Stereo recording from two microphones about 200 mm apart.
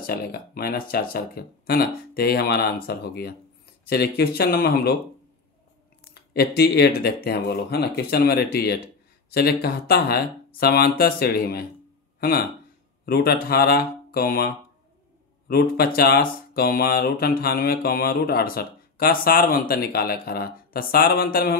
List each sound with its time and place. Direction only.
0.0 s speech: 50° left (ahead or behind)
6.1 s speech: 55° left (ahead or behind)